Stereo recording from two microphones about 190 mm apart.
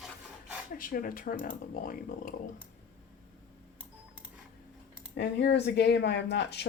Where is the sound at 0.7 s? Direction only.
50° left (ahead or behind).